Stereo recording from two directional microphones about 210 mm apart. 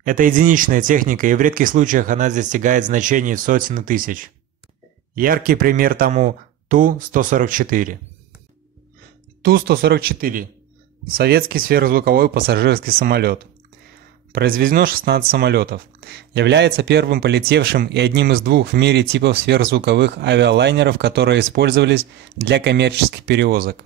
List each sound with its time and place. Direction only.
0.0 s speech: 40° right (ahead or behind)
9.4 s speech: 45° right (ahead or behind)